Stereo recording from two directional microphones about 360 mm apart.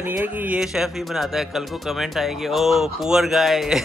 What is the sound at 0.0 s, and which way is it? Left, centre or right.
Speech, centre.